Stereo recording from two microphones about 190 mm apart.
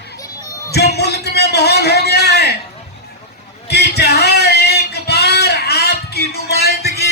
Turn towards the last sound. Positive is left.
turn(degrees=55)  # may be behind; listen again after turning